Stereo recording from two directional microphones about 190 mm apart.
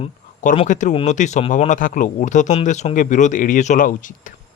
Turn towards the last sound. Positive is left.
turn(degrees=45)  # may be behind; listen again after turning